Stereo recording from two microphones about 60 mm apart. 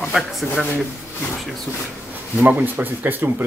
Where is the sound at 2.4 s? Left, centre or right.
Right.